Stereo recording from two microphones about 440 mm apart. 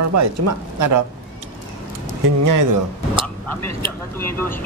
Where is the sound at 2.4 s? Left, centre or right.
Right.